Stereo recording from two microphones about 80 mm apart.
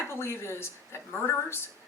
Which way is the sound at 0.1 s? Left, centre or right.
Left.